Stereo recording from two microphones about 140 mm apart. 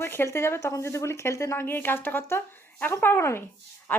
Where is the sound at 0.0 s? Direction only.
15° left (ahead or behind).